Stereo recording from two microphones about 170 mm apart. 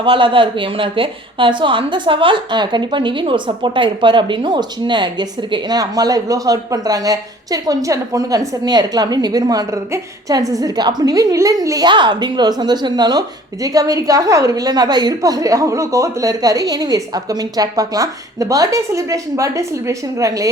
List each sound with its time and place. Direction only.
0.0 s a woman's voice: 30° right (ahead or behind)